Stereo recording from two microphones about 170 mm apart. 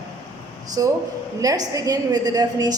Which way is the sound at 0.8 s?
20° right (ahead or behind).